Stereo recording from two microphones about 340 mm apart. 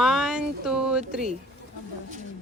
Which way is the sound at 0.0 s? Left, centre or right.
Centre.